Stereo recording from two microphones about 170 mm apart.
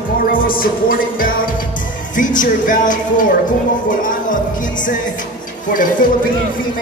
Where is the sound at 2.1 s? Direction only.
50° left (ahead or behind).